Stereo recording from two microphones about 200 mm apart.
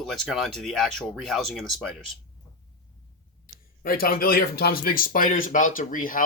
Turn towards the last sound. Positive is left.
turn(degrees=40)  # may be behind; listen again after turning